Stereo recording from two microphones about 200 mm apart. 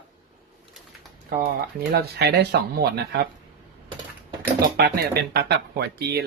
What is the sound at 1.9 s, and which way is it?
Speech, 55° right (ahead or behind).